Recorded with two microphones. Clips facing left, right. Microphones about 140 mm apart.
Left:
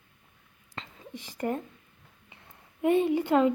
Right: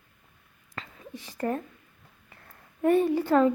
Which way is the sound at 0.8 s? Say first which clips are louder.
Right 1 dB; 25° left (ahead or behind).